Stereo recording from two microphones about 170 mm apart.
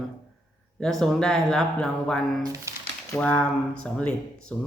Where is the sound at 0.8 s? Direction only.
Centre (ahead or behind).